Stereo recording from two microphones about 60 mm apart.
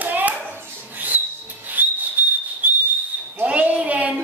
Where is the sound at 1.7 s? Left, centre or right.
Right.